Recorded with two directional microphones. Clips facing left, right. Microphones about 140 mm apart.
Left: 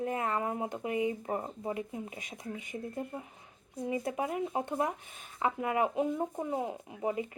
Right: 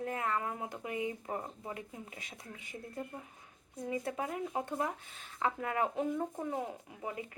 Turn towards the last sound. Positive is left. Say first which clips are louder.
# left 8 dB
turn(degrees=20)  # may be behind; listen again after turning